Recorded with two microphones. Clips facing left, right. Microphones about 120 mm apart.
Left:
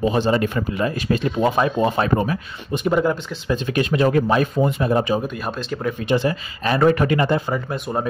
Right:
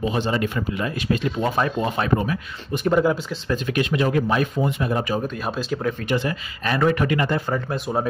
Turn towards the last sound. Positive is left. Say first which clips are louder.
# even
turn(degrees=0)  # may be behind; listen again after turning